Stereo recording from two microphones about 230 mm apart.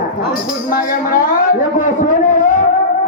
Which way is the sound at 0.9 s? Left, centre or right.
Left.